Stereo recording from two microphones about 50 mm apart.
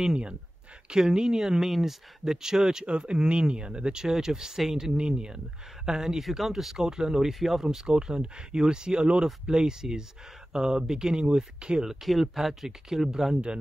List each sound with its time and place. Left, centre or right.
0.0 s speech: centre